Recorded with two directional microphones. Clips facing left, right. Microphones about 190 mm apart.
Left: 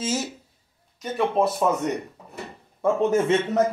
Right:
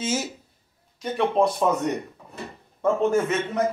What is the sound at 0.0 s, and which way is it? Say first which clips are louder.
Speech: even; centre (ahead or behind).